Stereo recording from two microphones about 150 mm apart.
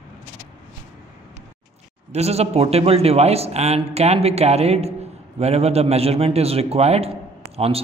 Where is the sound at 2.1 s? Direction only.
45° right (ahead or behind).